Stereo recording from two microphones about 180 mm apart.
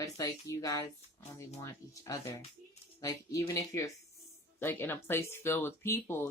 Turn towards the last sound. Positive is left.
turn(degrees=15)  # may be behind; listen again after turning